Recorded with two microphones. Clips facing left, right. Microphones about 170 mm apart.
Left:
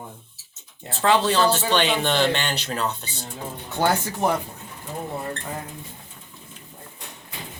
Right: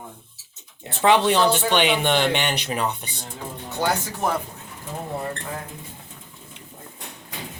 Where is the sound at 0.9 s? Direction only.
20° right (ahead or behind).